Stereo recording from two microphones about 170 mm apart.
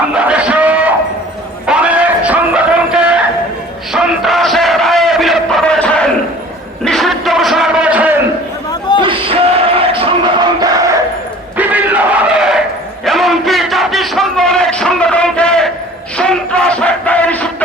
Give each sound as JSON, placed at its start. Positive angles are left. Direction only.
{"t": 0.1, "sound": "music", "side_deg": -5}
{"t": 3.9, "sound": "a sound", "side_deg": 0}
{"t": 9.0, "sound": "music", "side_deg": -30}
{"t": 11.5, "sound": "crowd", "side_deg": -10}
{"t": 13.1, "sound": "a sound", "side_deg": 0}
{"t": 16.1, "sound": "crowd", "side_deg": 5}